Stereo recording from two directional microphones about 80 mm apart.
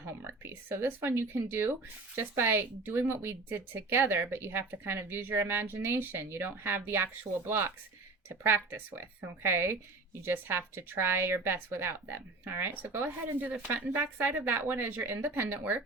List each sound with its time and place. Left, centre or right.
0.0 s a woman's voice: right